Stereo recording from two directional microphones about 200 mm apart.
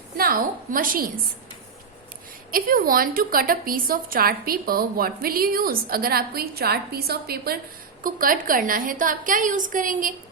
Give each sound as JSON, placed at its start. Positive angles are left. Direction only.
{"t": 0.2, "sound": "a woman's voice", "side_deg": -45}
{"t": 2.5, "sound": "a woman's voice", "side_deg": -45}